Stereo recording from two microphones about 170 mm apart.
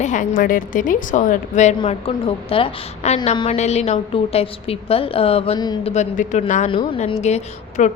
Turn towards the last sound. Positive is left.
turn(degrees=45)  # may be behind; listen again after turning